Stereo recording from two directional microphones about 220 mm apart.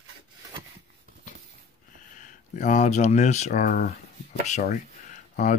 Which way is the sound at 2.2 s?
35° left (ahead or behind).